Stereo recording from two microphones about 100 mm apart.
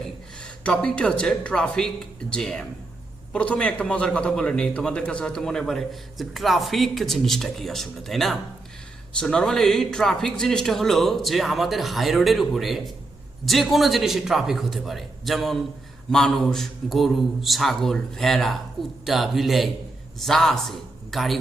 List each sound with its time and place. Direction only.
0.6 s a man's voice: 10° left (ahead or behind)